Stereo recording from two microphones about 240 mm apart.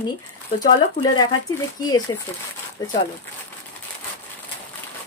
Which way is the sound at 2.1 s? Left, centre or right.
Centre.